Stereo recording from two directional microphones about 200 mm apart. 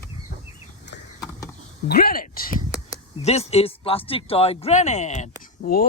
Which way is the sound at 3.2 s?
30° left (ahead or behind).